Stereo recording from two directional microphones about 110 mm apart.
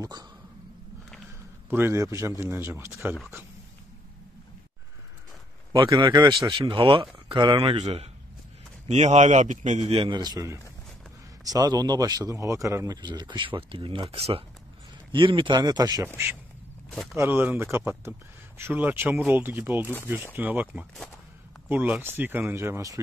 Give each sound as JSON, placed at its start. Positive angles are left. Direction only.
{"t": 0.0, "sound": "dog", "side_deg": -35}
{"t": 1.7, "sound": "a man's voice", "side_deg": -20}
{"t": 6.0, "sound": "speech", "side_deg": -40}
{"t": 6.7, "sound": "speech", "side_deg": -55}
{"t": 7.6, "sound": "a man's voice", "side_deg": -70}
{"t": 8.8, "sound": "a man's voice", "side_deg": -90}
{"t": 9.9, "sound": "speech", "side_deg": -45}
{"t": 17.1, "sound": "a man's voice", "side_deg": -25}